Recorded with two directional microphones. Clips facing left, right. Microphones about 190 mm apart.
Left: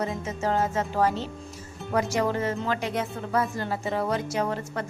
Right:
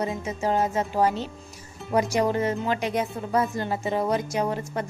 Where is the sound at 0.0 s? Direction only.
15° right (ahead or behind).